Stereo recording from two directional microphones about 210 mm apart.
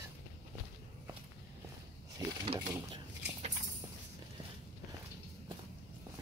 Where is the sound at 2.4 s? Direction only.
25° right (ahead or behind).